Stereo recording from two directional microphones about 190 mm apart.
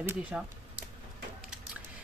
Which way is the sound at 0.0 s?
10° right (ahead or behind).